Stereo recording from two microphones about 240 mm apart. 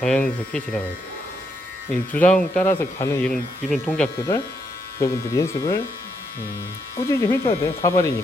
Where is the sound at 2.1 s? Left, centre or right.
Centre.